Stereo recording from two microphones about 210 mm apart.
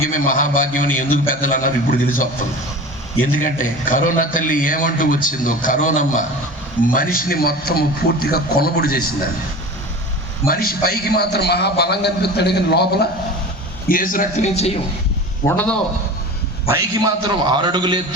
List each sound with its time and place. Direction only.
0.1 s a man's voice: 40° left (ahead or behind)
3.3 s a man's voice: 40° left (ahead or behind)
10.4 s a man's voice: 45° left (ahead or behind)
15.4 s a man's voice: 5° left (ahead or behind)
16.6 s a man's voice: 15° right (ahead or behind)